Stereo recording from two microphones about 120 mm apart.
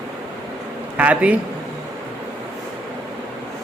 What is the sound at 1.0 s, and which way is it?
Speech, 15° right (ahead or behind).